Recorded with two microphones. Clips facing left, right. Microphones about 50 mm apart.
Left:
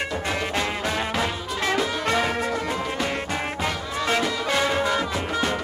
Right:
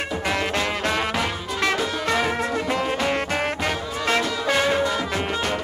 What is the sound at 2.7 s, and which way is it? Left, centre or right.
Music, right.